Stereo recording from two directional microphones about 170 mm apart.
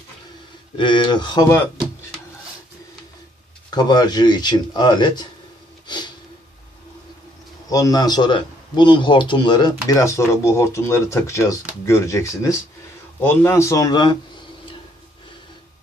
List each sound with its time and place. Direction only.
0.8 s speech: 30° left (ahead or behind)
3.7 s speech: 25° left (ahead or behind)
7.7 s speech: 20° left (ahead or behind)